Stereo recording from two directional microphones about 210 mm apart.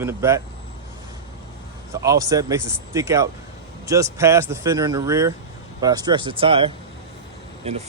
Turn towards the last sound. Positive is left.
turn(degrees=-30)  # may be behind; listen again after turning